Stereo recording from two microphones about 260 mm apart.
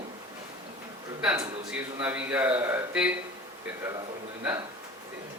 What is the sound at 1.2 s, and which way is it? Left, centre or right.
A man's voice, centre.